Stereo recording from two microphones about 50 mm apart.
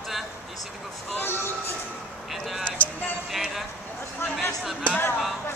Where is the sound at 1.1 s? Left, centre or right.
Left.